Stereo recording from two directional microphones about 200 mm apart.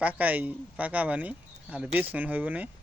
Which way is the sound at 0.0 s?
5° right (ahead or behind).